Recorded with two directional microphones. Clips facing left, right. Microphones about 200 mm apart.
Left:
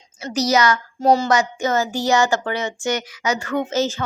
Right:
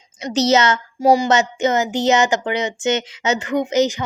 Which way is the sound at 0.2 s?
20° right (ahead or behind).